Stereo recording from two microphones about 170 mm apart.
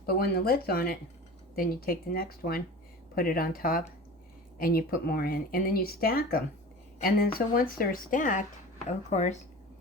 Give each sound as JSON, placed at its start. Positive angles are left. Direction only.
{"t": 0.0, "sound": "speech", "side_deg": 65}